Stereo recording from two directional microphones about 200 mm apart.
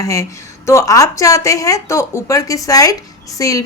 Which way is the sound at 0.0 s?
15° left (ahead or behind).